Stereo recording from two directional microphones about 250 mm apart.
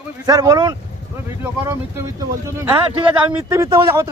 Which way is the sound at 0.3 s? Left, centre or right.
Centre.